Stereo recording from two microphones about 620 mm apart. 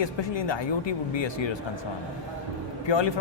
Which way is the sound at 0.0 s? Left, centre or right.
Left.